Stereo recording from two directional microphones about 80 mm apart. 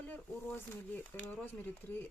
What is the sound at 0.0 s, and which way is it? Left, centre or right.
Speech, left.